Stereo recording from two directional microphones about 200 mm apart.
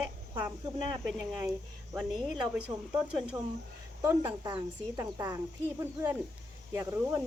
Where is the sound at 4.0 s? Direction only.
15° right (ahead or behind).